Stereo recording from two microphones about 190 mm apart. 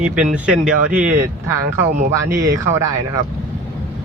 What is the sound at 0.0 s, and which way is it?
Speech, 5° right (ahead or behind).